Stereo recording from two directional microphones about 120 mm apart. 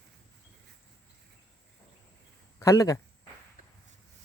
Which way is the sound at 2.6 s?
25° left (ahead or behind).